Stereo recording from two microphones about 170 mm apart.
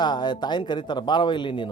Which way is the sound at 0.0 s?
25° left (ahead or behind).